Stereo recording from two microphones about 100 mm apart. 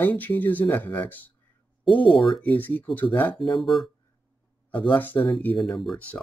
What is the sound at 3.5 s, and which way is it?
Speech, centre (ahead or behind).